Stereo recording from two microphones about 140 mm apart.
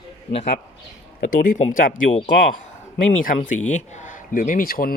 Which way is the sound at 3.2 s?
65° left (ahead or behind).